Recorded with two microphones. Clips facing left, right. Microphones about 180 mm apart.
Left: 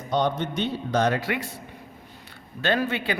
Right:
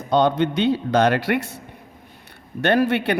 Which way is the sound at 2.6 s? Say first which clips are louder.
Right 6 dB; 65° right (ahead or behind).